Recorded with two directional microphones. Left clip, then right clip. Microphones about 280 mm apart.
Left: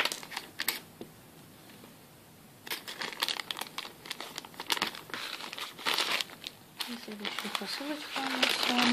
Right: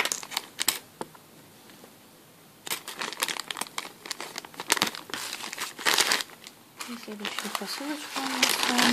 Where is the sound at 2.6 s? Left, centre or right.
Centre.